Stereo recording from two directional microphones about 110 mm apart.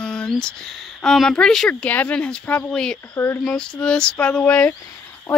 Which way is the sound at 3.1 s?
20° left (ahead or behind).